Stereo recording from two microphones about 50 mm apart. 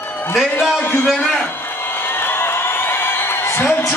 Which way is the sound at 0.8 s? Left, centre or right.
Left.